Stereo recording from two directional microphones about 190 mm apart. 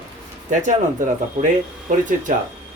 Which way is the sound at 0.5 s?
40° right (ahead or behind).